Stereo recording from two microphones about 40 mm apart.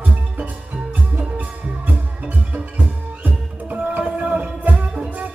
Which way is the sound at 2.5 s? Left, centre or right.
Right.